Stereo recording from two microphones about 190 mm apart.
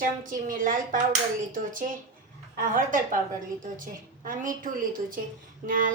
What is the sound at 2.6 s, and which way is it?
Speech, 45° right (ahead or behind).